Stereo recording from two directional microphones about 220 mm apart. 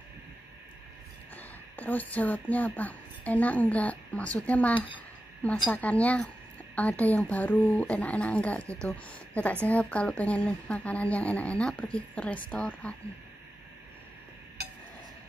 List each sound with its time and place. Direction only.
1.3 s speech: 10° left (ahead or behind)
4.7 s speech: 25° left (ahead or behind)
5.7 s speech: 5° left (ahead or behind)